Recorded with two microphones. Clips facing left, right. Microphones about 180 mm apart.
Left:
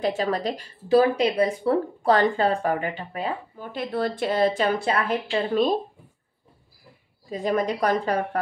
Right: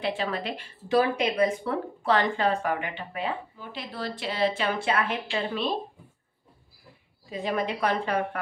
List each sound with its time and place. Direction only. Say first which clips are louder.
0.0 s speech: left 5 dB; 45° left (ahead or behind)
7.2 s a woman's voice: left 5 dB; 45° left (ahead or behind)